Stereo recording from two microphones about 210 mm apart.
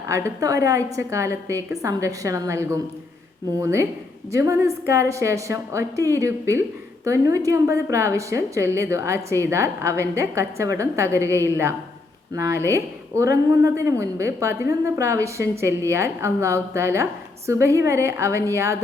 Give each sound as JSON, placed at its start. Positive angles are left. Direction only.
{"t": 0.1, "sound": "a woman's voice", "side_deg": -15}